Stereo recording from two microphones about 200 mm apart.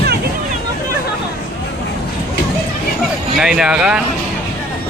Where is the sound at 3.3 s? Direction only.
5° right (ahead or behind).